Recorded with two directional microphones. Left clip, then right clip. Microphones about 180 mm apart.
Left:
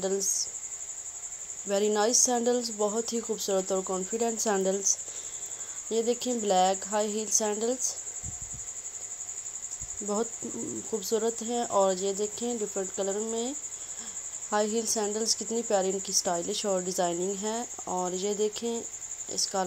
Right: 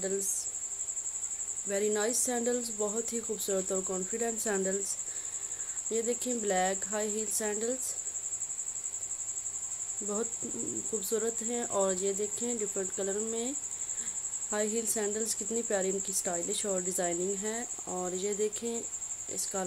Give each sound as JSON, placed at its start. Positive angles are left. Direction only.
{"t": 1.7, "sound": "a woman's voice", "side_deg": 15}
{"t": 11.0, "sound": "a woman's voice", "side_deg": 10}